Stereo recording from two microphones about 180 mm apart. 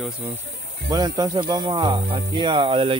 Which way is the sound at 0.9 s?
20° right (ahead or behind).